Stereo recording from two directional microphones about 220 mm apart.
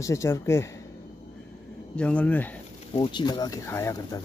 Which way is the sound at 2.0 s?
5° left (ahead or behind).